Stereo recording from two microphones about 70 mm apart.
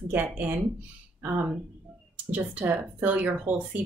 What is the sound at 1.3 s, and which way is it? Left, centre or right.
A woman's voice, right.